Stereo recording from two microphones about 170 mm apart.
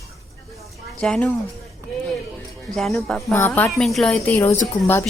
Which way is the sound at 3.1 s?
10° left (ahead or behind).